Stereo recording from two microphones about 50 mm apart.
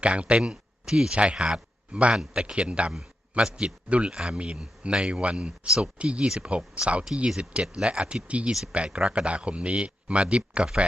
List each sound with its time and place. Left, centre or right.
0.0 s a man's voice: right
0.9 s a man's voice: centre